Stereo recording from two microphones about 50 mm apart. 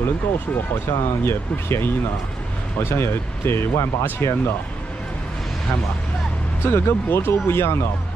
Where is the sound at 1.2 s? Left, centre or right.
Left.